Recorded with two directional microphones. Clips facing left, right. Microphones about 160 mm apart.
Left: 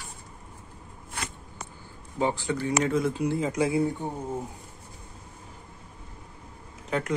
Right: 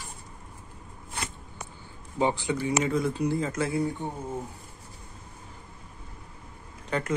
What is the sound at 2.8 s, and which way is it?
Speech, centre (ahead or behind).